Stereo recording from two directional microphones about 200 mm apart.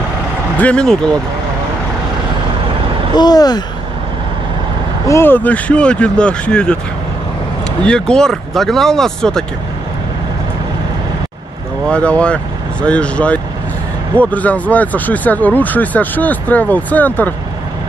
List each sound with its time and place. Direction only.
0.6 s speech: 5° left (ahead or behind)
3.2 s speech: 20° left (ahead or behind)
5.0 s speech: 10° left (ahead or behind)
7.8 s speech: 5° left (ahead or behind)
11.9 s speech: 5° left (ahead or behind)